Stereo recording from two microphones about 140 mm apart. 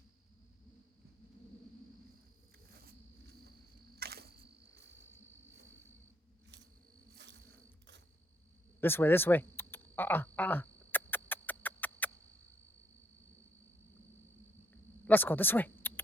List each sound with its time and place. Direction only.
3.9 s camera: 90° right
8.8 s a sound: 15° left (ahead or behind)
14.7 s insect: 10° left (ahead or behind)